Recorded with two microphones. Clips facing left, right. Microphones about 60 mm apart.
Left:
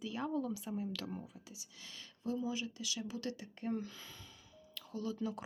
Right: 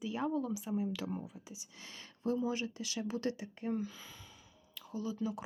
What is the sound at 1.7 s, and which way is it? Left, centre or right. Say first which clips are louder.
Speech: right 2 dB; right.